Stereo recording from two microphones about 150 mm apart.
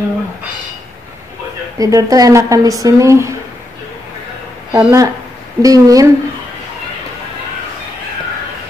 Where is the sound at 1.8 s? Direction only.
25° right (ahead or behind).